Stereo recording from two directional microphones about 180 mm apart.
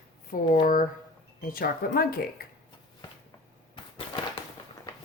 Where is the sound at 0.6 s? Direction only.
50° left (ahead or behind).